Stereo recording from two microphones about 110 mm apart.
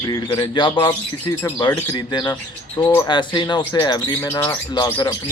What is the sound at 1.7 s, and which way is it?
Bird, 20° left (ahead or behind).